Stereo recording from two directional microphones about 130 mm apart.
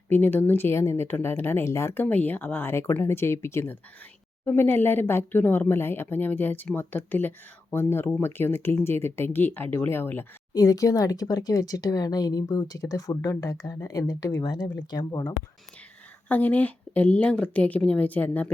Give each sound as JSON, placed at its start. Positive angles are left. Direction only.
{"t": 0.1, "sound": "speech", "side_deg": 15}
{"t": 10.5, "sound": "speech", "side_deg": 25}
{"t": 16.3, "sound": "speech", "side_deg": 15}